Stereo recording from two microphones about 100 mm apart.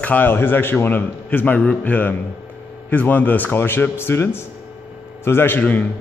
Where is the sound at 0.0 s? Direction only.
20° left (ahead or behind).